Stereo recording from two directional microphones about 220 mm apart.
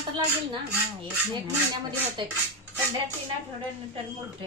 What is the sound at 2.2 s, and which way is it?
Cutlery, 20° right (ahead or behind).